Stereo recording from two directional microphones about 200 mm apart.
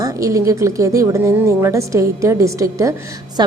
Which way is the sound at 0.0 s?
15° right (ahead or behind).